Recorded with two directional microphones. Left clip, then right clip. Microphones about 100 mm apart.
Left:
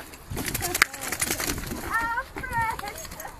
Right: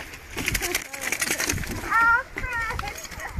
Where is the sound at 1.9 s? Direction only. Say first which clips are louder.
Right 8 dB; 20° left (ahead or behind).